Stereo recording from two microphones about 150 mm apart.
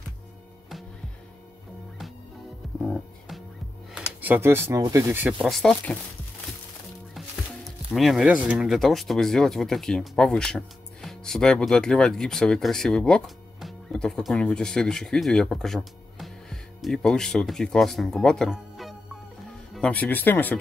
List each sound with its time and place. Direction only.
2.8 s music: centre (ahead or behind)
3.9 s speech: 10° right (ahead or behind)
5.5 s speech: 5° left (ahead or behind)
7.2 s speech: centre (ahead or behind)